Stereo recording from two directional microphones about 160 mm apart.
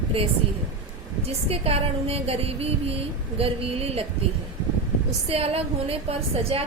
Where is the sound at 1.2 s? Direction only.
40° right (ahead or behind).